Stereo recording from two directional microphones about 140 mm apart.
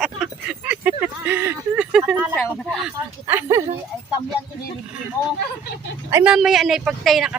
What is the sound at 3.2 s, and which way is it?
Speech, 15° right (ahead or behind).